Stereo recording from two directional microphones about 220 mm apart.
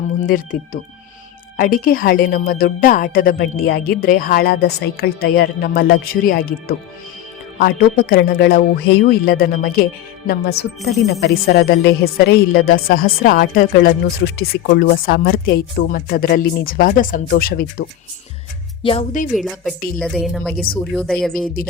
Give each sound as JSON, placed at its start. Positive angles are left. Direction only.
{"t": 0.3, "sound": "a woman's voice", "side_deg": 40}
{"t": 18.8, "sound": "speech", "side_deg": 25}
{"t": 19.4, "sound": "speech", "side_deg": 0}
{"t": 21.4, "sound": "speech", "side_deg": 40}